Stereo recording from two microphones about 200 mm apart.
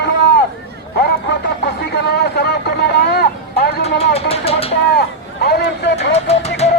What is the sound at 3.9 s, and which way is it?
Vehicle, 30° left (ahead or behind).